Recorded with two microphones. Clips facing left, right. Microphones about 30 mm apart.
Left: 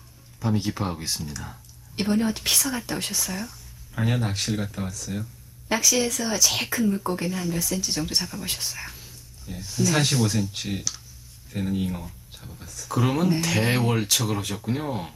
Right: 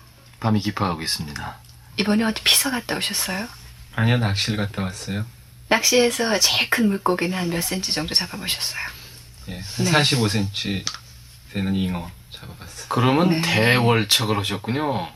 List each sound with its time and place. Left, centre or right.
0.3 s speech: right